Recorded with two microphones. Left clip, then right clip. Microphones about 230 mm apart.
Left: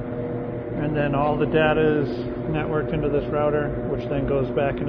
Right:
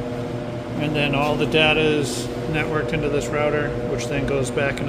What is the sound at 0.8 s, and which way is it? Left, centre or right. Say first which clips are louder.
Speech: right 2 dB; centre.